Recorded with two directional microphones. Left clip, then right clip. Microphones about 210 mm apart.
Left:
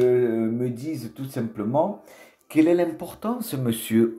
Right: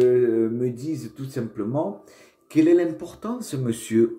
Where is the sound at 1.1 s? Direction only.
30° left (ahead or behind).